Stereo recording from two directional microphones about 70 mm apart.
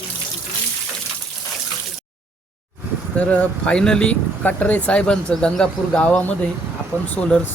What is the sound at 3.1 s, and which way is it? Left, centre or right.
Speech, centre.